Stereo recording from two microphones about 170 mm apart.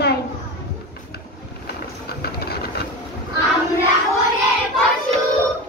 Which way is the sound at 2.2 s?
65° left (ahead or behind).